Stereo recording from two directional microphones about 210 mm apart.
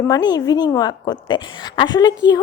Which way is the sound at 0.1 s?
20° left (ahead or behind).